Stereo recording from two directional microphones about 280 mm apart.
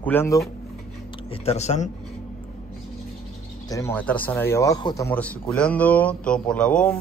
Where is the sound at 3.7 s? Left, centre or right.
Centre.